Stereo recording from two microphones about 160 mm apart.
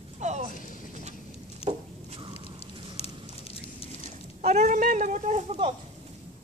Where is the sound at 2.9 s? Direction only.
40° left (ahead or behind).